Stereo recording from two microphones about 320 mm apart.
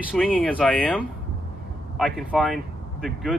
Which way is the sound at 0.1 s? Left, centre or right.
Centre.